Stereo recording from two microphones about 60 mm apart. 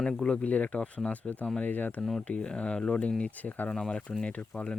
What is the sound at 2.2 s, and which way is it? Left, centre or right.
Speech, centre.